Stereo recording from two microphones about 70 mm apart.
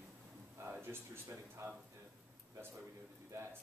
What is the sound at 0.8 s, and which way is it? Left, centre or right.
Speech, right.